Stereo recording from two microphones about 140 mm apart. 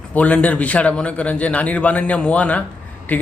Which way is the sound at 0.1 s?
10° left (ahead or behind).